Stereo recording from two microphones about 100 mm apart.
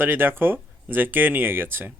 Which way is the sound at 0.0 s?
20° right (ahead or behind).